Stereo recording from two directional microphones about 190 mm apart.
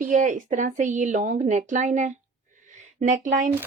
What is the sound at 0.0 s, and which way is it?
A woman's voice, 40° right (ahead or behind).